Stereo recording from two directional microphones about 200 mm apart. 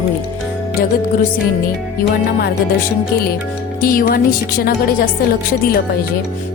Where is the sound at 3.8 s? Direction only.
45° left (ahead or behind).